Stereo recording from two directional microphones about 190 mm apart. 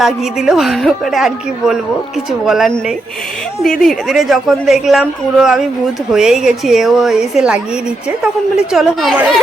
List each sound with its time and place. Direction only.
0.0 s speech: centre (ahead or behind)